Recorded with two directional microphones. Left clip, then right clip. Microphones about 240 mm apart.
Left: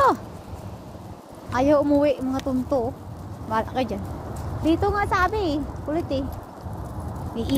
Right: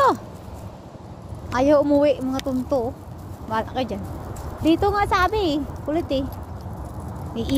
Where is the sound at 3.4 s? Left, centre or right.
Centre.